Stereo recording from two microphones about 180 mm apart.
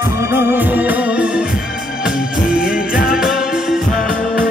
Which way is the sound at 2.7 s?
50° left (ahead or behind).